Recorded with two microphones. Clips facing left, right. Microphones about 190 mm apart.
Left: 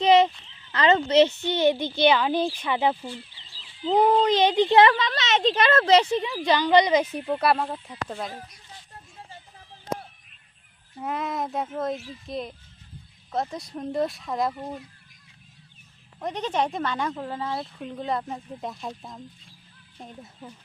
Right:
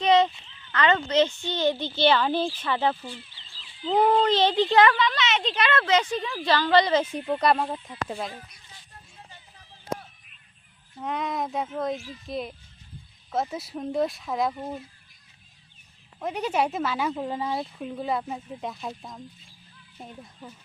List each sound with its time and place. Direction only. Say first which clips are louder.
0.0 s a sound: left 2 dB; 25° left (ahead or behind)
0.7 s speech: left 3 dB; 25° left (ahead or behind)
4.9 s speech: even; 40° left (ahead or behind); by 7.6 s 5° left (ahead or behind)
8.0 s speech: right 1 dB; 5° right (ahead or behind)
11.0 s speech: even; 5° left (ahead or behind)
16.2 s speech: right 1 dB; 10° right (ahead or behind)